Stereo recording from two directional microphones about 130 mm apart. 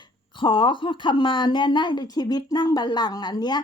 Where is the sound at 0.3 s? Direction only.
40° left (ahead or behind).